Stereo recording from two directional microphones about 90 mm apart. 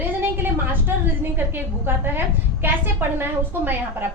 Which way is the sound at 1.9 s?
25° right (ahead or behind).